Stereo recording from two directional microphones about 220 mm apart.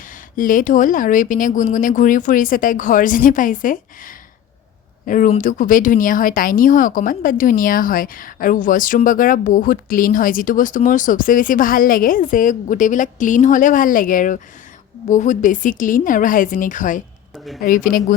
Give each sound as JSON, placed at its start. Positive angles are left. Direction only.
{"t": 0.0, "sound": "speech", "side_deg": 40}
{"t": 17.3, "sound": "speech", "side_deg": 0}
{"t": 17.6, "sound": "speech", "side_deg": 40}